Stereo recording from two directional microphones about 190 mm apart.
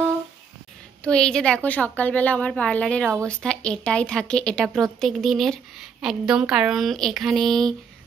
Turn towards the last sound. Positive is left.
turn(degrees=0)  # may be behind; listen again after turning